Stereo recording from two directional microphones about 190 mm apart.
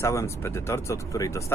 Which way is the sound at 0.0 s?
15° left (ahead or behind).